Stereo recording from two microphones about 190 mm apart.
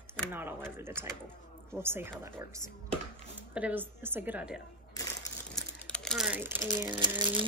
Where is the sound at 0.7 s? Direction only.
10° right (ahead or behind).